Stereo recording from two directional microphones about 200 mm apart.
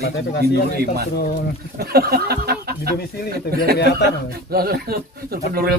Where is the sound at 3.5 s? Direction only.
50° right (ahead or behind).